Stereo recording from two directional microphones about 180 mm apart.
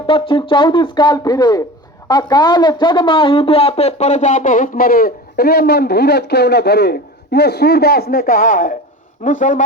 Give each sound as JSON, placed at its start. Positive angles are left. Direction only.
{"t": 0.1, "sound": "speech", "side_deg": 30}